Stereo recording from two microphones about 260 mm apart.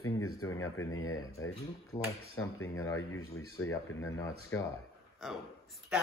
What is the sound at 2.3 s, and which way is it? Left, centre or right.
Speech, left.